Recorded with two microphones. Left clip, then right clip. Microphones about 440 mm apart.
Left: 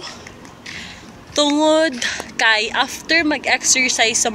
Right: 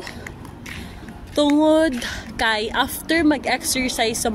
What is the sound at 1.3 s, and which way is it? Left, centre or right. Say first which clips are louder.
Speech: left 1 dB; right.